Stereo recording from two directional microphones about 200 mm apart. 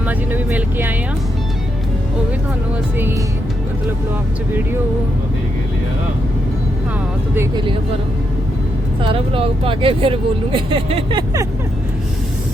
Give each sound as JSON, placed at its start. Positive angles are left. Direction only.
{"t": 0.0, "sound": "speech", "side_deg": -10}
{"t": 7.3, "sound": "speech", "side_deg": -20}
{"t": 9.0, "sound": "speech", "side_deg": -25}